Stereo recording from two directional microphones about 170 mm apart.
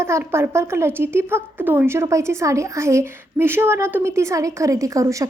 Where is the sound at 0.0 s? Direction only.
15° right (ahead or behind).